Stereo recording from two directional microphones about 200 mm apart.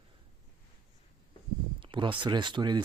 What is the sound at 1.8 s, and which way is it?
Speech, 25° right (ahead or behind).